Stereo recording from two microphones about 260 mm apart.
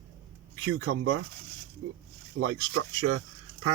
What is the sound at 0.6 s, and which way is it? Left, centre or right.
Speech, right.